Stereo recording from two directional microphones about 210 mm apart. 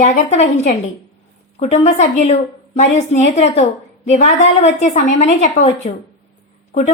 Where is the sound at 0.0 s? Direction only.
30° left (ahead or behind).